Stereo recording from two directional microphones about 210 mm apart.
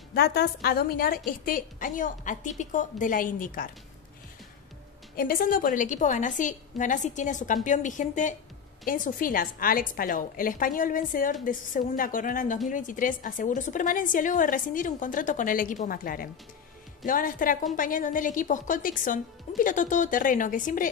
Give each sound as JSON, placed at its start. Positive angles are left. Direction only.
{"t": 0.1, "sound": "a woman's voice", "side_deg": 50}
{"t": 5.1, "sound": "a woman's voice", "side_deg": 45}